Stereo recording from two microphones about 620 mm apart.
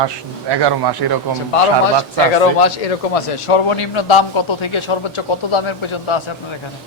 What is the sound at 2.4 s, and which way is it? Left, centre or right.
Speech, left.